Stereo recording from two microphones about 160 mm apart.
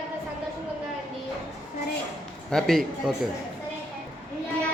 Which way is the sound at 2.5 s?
Centre (ahead or behind).